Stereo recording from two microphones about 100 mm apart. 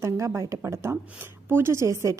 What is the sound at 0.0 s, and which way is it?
A woman's voice, 30° right (ahead or behind).